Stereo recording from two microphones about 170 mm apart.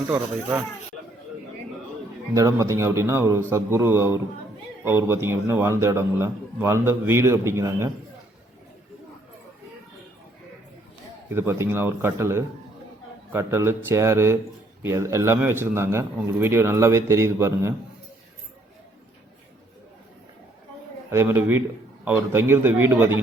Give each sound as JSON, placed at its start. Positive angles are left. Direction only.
{"t": 2.3, "sound": "a man's voice", "side_deg": -20}
{"t": 11.3, "sound": "a man's voice", "side_deg": -15}
{"t": 21.1, "sound": "a man's voice", "side_deg": -15}